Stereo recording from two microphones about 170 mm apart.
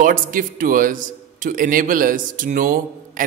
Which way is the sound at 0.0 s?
55° right (ahead or behind).